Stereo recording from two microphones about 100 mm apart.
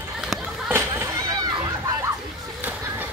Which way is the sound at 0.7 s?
25° right (ahead or behind).